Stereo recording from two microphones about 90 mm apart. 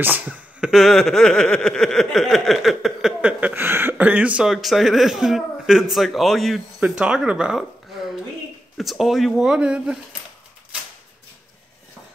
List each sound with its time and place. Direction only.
0.0 s speech: 20° right (ahead or behind)
0.7 s speech: centre (ahead or behind)
4.5 s speech: centre (ahead or behind)
8.7 s speech: centre (ahead or behind)